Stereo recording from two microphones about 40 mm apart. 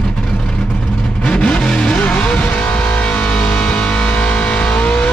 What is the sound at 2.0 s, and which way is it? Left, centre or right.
Vehicle, left.